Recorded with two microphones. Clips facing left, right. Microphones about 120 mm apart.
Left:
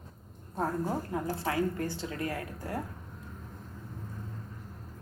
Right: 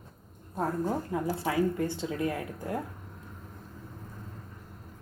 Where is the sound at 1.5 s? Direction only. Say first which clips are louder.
Right 3 dB; 20° right (ahead or behind).